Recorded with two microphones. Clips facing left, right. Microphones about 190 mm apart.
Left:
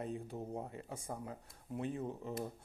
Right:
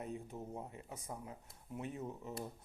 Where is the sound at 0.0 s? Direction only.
35° left (ahead or behind).